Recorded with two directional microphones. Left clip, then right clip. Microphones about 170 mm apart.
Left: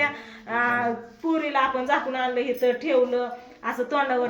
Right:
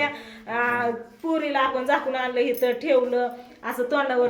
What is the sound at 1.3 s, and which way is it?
A woman's voice, 10° right (ahead or behind).